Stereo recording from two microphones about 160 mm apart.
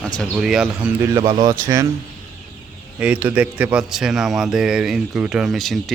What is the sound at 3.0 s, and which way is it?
Speech, 10° right (ahead or behind).